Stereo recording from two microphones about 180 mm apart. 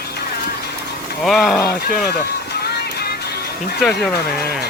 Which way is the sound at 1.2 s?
Centre (ahead or behind).